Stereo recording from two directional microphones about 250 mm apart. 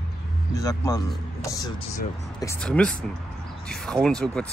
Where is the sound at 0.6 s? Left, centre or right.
Centre.